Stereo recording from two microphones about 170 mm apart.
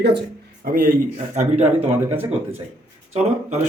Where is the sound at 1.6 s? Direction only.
10° right (ahead or behind).